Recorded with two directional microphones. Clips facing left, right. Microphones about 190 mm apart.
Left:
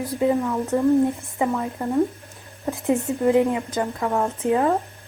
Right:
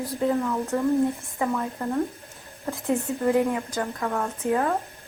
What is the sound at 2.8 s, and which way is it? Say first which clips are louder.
A woman's voice: left 4 dB; 20° left (ahead or behind).